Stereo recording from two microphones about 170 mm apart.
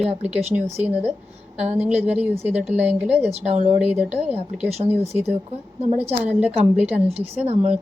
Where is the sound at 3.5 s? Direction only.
40° right (ahead or behind).